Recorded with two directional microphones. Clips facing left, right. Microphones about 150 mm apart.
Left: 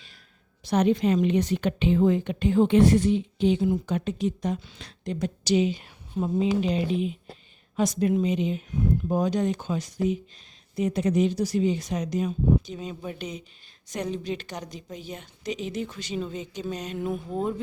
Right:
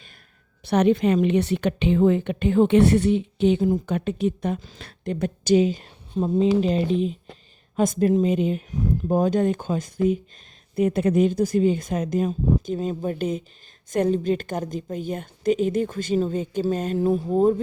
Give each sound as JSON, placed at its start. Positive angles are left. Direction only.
{"t": 0.6, "sound": "a woman's voice", "side_deg": -60}
{"t": 3.6, "sound": "a woman's voice", "side_deg": -45}
{"t": 6.1, "sound": "speech", "side_deg": -30}
{"t": 6.6, "sound": "a woman's voice", "side_deg": -40}
{"t": 17.0, "sound": "speech", "side_deg": -35}